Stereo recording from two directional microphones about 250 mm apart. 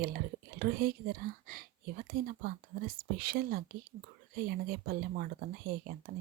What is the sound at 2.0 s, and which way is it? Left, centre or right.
Speech, right.